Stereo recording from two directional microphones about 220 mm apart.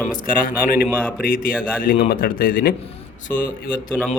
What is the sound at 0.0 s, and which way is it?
A man's voice, 40° left (ahead or behind).